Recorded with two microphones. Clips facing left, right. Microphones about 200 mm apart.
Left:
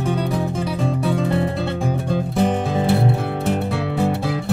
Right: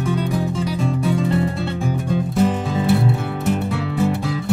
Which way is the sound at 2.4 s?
55° left (ahead or behind).